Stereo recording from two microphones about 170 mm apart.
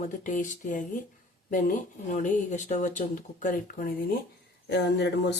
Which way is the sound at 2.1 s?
45° left (ahead or behind).